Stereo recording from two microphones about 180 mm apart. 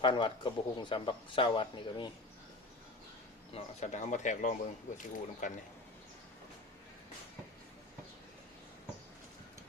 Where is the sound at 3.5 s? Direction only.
35° left (ahead or behind).